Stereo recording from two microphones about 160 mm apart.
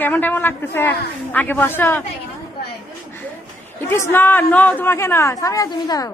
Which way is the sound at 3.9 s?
15° left (ahead or behind).